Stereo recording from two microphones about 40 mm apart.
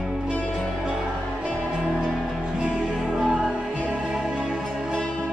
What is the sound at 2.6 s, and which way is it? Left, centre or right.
Music, centre.